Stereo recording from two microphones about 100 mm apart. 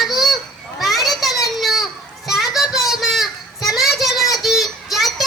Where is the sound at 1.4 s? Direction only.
Centre (ahead or behind).